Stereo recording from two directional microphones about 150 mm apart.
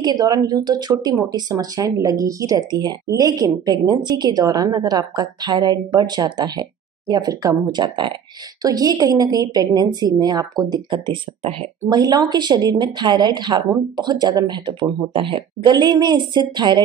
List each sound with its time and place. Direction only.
0.0 s speech: 25° right (ahead or behind)